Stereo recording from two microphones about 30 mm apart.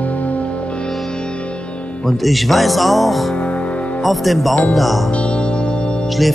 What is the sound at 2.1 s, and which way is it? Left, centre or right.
Speech, centre.